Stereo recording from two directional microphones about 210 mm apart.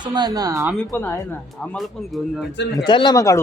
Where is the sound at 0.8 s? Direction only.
5° left (ahead or behind).